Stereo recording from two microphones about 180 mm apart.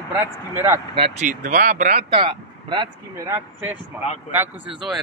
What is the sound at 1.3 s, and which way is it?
Speech, 50° right (ahead or behind).